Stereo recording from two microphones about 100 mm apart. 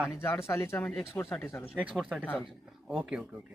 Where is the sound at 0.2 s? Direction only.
25° left (ahead or behind).